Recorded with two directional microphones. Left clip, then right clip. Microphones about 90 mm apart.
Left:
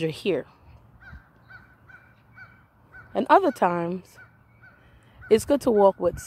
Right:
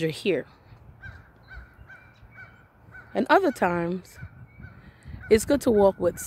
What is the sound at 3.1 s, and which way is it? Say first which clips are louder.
Speech: left 2 dB; 10° right (ahead or behind).